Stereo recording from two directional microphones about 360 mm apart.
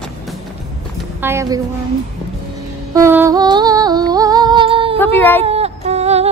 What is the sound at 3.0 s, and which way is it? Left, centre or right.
Music, centre.